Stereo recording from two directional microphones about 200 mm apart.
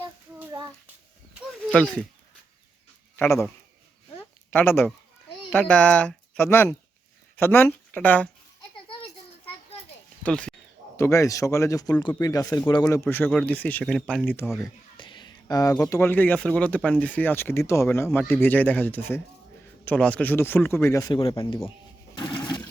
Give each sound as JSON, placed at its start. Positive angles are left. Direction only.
{"t": 1.7, "sound": "speech", "side_deg": 5}
{"t": 3.2, "sound": "speech", "side_deg": 15}
{"t": 4.2, "sound": "a sound", "side_deg": 10}
{"t": 5.5, "sound": "speech", "side_deg": 5}
{"t": 8.9, "sound": "children playing", "side_deg": 25}
{"t": 10.2, "sound": "speech", "side_deg": 5}
{"t": 14.6, "sound": "a sound", "side_deg": 25}
{"t": 15.7, "sound": "speech", "side_deg": 10}
{"t": 21.2, "sound": "a man's voice", "side_deg": 25}
{"t": 22.3, "sound": "a sound", "side_deg": 20}